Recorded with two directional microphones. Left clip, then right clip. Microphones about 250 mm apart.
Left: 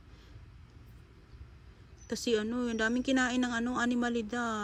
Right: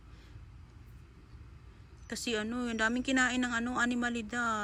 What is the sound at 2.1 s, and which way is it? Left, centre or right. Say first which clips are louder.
A woman's voice: left 4 dB; centre.